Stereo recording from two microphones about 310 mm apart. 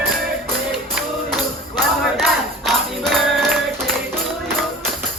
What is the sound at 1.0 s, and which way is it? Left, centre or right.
Music, centre.